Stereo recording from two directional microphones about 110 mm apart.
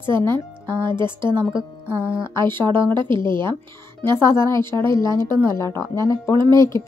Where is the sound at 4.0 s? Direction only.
25° left (ahead or behind).